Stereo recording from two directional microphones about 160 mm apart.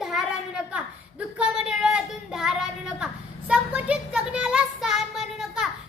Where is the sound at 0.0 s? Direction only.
Centre (ahead or behind).